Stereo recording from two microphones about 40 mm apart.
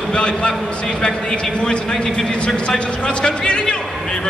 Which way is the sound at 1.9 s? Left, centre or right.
Centre.